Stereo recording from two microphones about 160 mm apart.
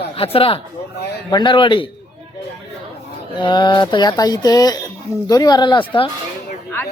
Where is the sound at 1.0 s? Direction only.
90° left.